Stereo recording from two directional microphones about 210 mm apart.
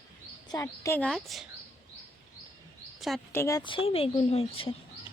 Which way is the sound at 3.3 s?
15° left (ahead or behind).